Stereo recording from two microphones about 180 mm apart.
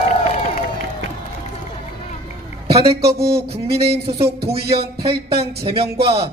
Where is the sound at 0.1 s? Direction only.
40° left (ahead or behind).